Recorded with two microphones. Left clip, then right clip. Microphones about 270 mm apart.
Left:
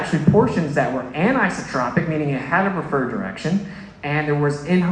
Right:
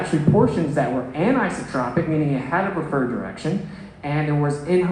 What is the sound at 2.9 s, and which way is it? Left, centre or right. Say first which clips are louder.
A man's voice: left 1 dB; left.